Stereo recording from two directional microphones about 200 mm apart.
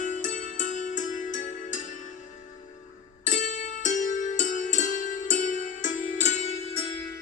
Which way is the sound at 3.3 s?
40° left (ahead or behind).